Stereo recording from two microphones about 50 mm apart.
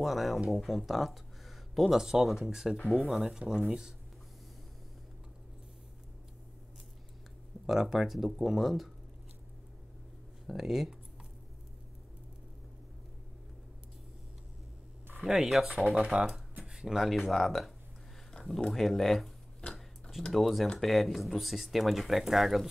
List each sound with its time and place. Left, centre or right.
0.0 s speech: centre
3.2 s speech: centre
7.6 s speech: centre
10.4 s speech: centre
15.2 s speech: centre
18.3 s speech: centre
20.3 s speech: centre